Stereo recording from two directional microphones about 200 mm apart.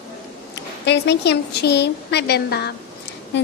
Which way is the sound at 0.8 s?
60° left (ahead or behind).